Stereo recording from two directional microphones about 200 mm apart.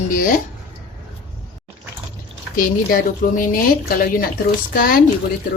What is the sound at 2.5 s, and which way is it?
Speech, 45° left (ahead or behind).